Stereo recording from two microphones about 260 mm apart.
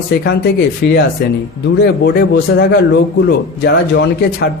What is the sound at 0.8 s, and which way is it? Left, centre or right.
A man's voice, left.